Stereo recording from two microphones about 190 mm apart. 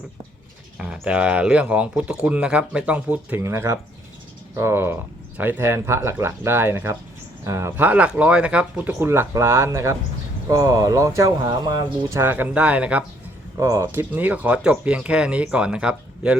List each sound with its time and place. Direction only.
0.8 s speech: 5° right (ahead or behind)